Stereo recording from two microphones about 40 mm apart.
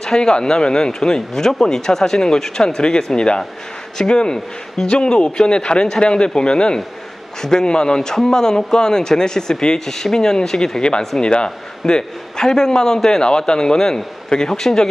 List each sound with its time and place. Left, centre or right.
0.0 s a man's voice: centre